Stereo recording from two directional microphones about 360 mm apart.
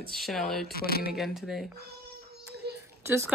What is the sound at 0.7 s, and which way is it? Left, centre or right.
Speech, left.